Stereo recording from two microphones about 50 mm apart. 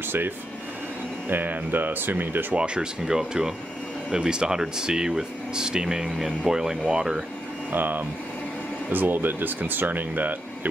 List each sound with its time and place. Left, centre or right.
1.3 s speech: right
2.5 s speech: centre
7.7 s speech: right